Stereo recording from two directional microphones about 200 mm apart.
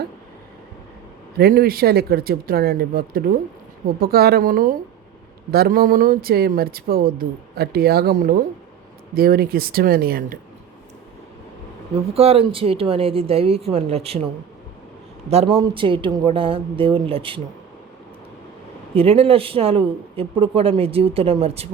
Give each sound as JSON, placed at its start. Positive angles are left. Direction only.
{"t": 1.4, "sound": "speech", "side_deg": -50}
{"t": 11.9, "sound": "speech", "side_deg": -30}
{"t": 15.3, "sound": "speech", "side_deg": -30}
{"t": 18.9, "sound": "speech", "side_deg": -30}